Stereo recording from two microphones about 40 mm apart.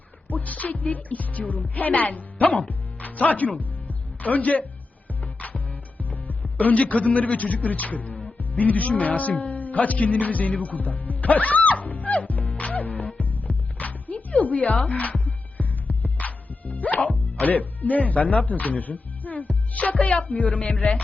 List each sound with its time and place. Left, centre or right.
0.3 s speech: left
2.6 s music: left
14.8 s speech: left
15.2 s music: left
19.7 s speech: left